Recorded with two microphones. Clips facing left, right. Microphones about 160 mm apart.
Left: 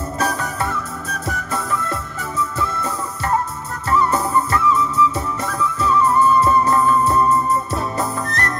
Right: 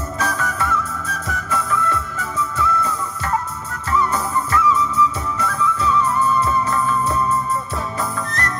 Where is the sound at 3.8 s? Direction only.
40° left (ahead or behind).